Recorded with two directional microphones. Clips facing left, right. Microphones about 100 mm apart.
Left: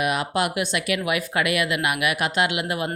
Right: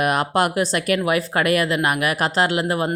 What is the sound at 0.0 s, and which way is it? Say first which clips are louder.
Speech: right 4 dB; 45° right (ahead or behind).